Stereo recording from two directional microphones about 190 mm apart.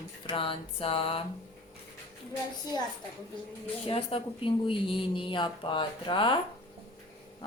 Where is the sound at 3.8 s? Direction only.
30° left (ahead or behind).